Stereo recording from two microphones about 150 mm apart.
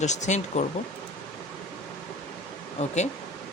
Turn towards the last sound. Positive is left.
turn(degrees=50)  # may be behind; listen again after turning